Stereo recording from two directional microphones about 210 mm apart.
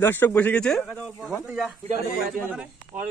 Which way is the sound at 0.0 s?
10° left (ahead or behind).